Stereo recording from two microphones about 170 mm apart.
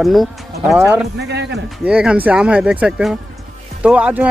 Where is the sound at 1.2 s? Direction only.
90° right.